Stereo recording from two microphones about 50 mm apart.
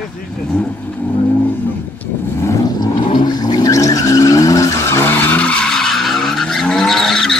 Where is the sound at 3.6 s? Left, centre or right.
Left.